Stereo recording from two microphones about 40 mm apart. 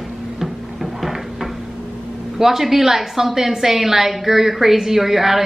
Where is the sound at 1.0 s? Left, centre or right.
Centre.